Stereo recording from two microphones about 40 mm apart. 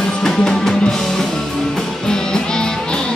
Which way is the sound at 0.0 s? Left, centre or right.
Centre.